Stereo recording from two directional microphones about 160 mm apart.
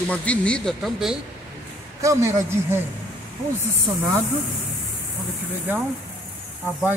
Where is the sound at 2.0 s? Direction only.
20° right (ahead or behind).